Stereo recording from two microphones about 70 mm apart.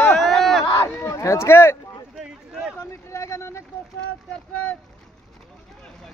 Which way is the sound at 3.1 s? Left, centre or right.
Left.